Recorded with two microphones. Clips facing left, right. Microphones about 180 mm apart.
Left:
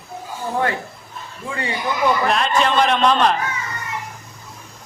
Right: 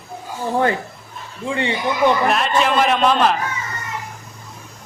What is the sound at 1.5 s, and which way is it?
Speech, 25° right (ahead or behind).